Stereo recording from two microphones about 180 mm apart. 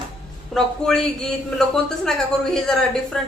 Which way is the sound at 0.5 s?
5° left (ahead or behind).